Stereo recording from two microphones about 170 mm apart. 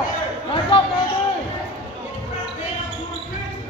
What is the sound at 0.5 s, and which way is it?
Chatter, 30° left (ahead or behind).